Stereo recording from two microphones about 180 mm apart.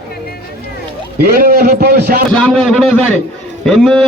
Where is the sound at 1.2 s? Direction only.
55° right (ahead or behind).